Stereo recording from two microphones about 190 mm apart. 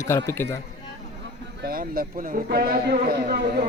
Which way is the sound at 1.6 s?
50° right (ahead or behind).